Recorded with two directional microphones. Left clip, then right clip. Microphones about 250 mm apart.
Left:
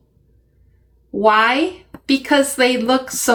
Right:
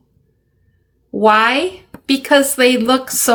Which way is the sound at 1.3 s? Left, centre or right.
Right.